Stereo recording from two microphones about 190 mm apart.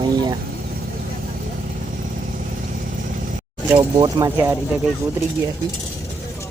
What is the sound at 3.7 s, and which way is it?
Speech, 20° right (ahead or behind).